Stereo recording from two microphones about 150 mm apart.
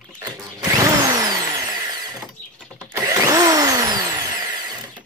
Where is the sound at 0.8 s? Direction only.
25° right (ahead or behind).